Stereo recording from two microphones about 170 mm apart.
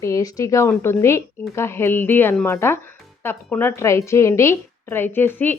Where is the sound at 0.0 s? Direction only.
20° left (ahead or behind).